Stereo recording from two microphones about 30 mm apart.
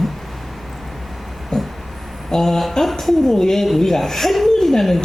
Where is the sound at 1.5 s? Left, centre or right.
Centre.